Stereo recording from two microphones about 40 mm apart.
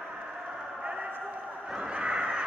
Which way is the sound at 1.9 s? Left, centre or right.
Right.